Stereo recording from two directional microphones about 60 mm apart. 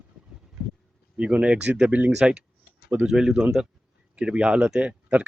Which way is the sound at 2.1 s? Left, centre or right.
Centre.